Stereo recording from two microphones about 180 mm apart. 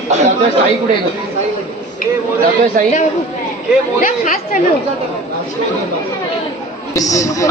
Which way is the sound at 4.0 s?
45° left (ahead or behind).